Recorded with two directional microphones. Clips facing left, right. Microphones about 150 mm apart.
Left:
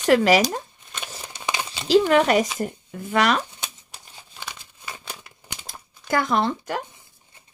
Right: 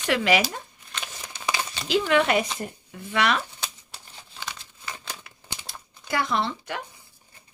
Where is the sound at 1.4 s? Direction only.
20° left (ahead or behind).